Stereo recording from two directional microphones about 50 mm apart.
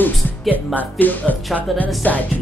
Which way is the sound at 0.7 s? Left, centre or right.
Left.